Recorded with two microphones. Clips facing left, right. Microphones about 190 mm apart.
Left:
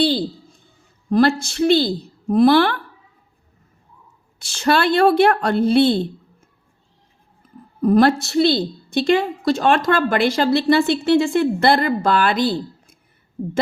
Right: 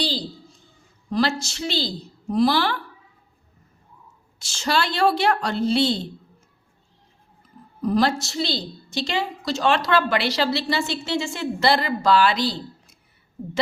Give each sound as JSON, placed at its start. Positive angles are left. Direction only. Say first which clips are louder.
{"t": 0.0, "sound": "a woman's voice", "louder": "left 9 dB", "side_deg": 55}
{"t": 4.4, "sound": "a woman's voice", "louder": "left 6 dB", "side_deg": 60}
{"t": 7.8, "sound": "a woman's voice", "louder": "left 7 dB", "side_deg": 55}